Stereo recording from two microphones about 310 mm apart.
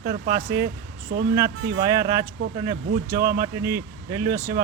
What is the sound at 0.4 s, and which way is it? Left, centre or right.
Speech, right.